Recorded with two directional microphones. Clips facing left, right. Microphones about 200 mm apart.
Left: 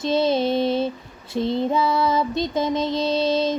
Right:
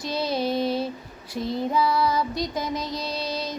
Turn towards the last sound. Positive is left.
turn(degrees=25)  # may be behind; listen again after turning